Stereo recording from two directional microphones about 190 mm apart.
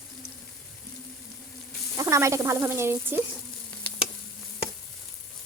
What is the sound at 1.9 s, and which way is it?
Sizzle, 15° right (ahead or behind).